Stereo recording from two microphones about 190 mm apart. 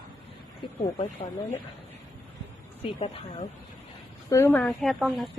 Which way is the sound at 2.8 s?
35° left (ahead or behind).